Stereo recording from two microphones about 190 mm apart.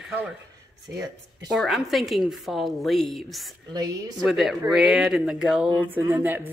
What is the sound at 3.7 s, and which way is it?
Speech, 20° right (ahead or behind).